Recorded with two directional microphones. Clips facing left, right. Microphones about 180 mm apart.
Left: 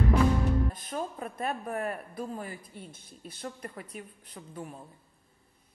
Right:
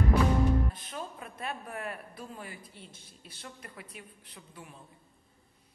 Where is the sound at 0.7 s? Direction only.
45° left (ahead or behind).